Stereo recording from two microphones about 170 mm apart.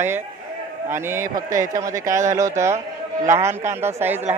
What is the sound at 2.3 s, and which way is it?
Speech, 15° right (ahead or behind).